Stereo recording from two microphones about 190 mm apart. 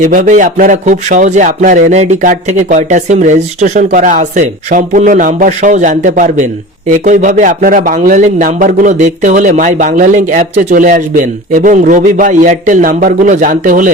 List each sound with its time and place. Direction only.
0.0 s speech: 40° right (ahead or behind)